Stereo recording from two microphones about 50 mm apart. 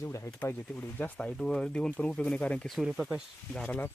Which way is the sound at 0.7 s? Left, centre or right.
Left.